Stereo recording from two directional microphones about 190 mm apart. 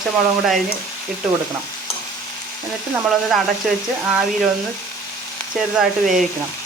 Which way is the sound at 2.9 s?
Centre (ahead or behind).